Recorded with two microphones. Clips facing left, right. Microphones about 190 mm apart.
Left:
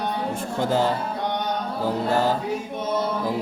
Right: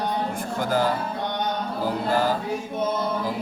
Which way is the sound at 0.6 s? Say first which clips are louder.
Left 1 dB; 25° left (ahead or behind).